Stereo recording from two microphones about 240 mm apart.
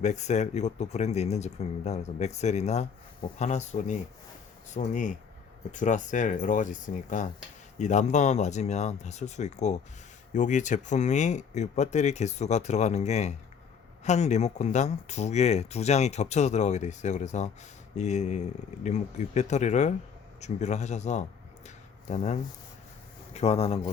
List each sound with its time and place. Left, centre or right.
0.0 s speech: left